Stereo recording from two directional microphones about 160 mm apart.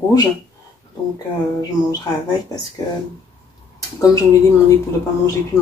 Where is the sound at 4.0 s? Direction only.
20° left (ahead or behind).